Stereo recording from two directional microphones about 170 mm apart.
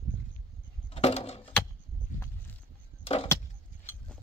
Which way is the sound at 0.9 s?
40° left (ahead or behind).